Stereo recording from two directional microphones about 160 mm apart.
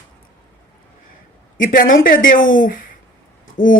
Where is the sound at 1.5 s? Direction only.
60° left (ahead or behind).